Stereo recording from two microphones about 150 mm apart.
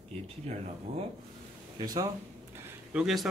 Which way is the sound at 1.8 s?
25° right (ahead or behind).